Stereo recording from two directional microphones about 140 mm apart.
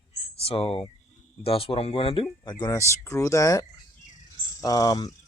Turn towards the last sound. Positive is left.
turn(degrees=25)  # may be behind; listen again after turning